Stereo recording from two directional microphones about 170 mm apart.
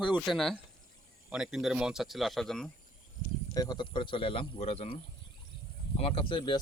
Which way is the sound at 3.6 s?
25° left (ahead or behind).